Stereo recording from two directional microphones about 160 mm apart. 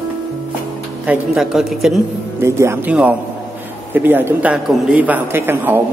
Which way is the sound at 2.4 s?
15° right (ahead or behind).